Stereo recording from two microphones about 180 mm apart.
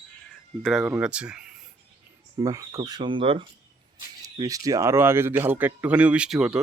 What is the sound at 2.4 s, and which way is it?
Speech, 20° right (ahead or behind).